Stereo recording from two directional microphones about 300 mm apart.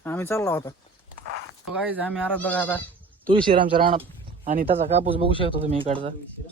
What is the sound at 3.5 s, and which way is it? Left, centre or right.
Speech, centre.